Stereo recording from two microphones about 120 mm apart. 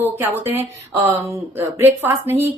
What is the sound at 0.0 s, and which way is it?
Speech, 15° right (ahead or behind).